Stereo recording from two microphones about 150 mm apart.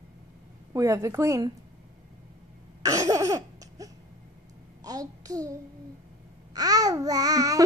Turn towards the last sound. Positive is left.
turn(degrees=-25)  # may be behind; listen again after turning